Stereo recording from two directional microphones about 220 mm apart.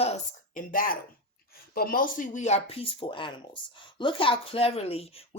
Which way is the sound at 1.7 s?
40° left (ahead or behind).